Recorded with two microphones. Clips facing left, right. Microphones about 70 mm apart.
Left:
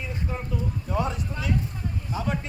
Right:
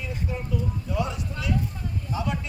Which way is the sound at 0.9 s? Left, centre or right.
Left.